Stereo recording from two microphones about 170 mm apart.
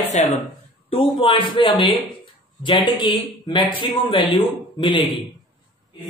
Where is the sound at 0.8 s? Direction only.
30° left (ahead or behind).